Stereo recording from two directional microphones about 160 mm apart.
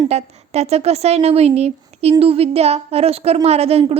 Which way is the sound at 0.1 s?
40° right (ahead or behind).